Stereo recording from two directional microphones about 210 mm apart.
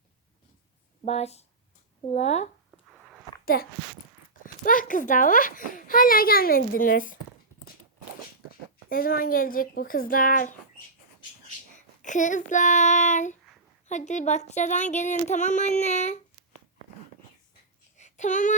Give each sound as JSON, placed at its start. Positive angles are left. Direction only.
{"t": 1.0, "sound": "a child's voice", "side_deg": 30}
{"t": 3.4, "sound": "a child's voice", "side_deg": 45}
{"t": 8.9, "sound": "speech", "side_deg": 45}
{"t": 12.0, "sound": "a child's voice", "side_deg": 35}
{"t": 17.9, "sound": "child singing", "side_deg": 35}